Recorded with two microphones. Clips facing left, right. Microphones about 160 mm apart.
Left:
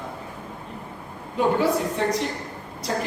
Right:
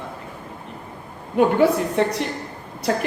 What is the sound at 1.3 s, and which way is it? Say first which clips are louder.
Speech: right 4 dB; 60° right (ahead or behind).